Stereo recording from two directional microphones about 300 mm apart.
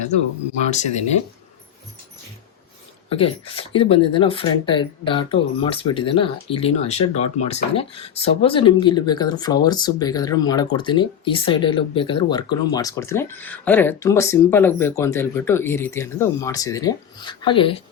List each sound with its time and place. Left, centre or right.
3.1 s speech: centre